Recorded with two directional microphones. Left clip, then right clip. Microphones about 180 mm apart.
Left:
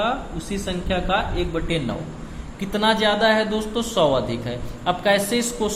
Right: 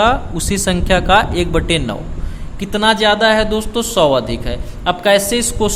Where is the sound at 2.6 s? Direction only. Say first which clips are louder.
Right 6 dB; 25° right (ahead or behind).